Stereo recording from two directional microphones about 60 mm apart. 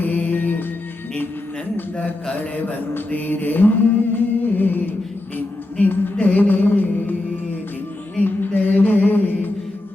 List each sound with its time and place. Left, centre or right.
0.0 s music: left
1.7 s a sound: left
6.1 s music: left
8.2 s music: left